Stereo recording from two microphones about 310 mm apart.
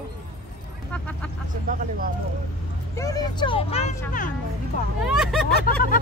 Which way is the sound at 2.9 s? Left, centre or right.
Centre.